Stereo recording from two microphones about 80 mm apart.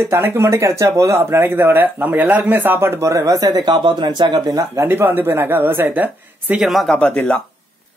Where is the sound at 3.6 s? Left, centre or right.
Right.